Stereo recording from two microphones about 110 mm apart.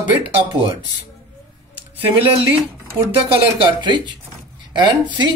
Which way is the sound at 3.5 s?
50° right (ahead or behind).